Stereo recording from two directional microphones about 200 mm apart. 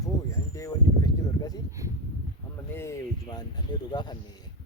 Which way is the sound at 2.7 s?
15° left (ahead or behind).